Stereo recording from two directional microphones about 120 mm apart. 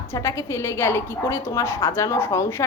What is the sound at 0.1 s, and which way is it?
A woman's voice, 25° left (ahead or behind).